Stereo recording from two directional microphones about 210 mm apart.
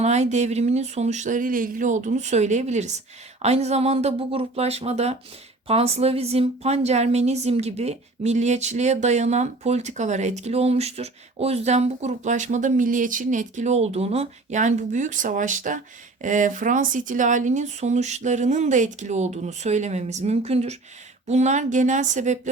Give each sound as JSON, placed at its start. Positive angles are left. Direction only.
{"t": 0.0, "sound": "a woman's voice", "side_deg": -35}